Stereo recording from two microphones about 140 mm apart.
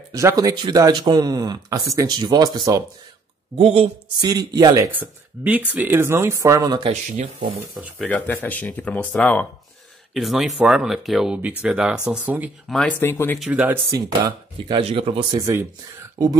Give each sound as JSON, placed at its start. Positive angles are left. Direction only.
{"t": 0.1, "sound": "speech", "side_deg": -25}
{"t": 3.5, "sound": "speech", "side_deg": -45}
{"t": 4.2, "sound": "speech", "side_deg": -25}
{"t": 6.9, "sound": "speech", "side_deg": -50}
{"t": 7.8, "sound": "speech", "side_deg": -15}
{"t": 8.1, "sound": "speech", "side_deg": 15}
{"t": 10.1, "sound": "speech", "side_deg": 0}
{"t": 12.6, "sound": "speech", "side_deg": 5}
{"t": 13.0, "sound": "speech", "side_deg": 15}
{"t": 13.5, "sound": "speech", "side_deg": -10}
{"t": 13.8, "sound": "speech", "side_deg": -25}
{"t": 14.8, "sound": "speech", "side_deg": -45}
{"t": 16.2, "sound": "speech", "side_deg": -25}